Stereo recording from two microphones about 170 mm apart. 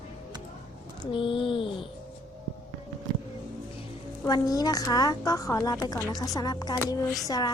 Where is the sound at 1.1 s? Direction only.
30° left (ahead or behind).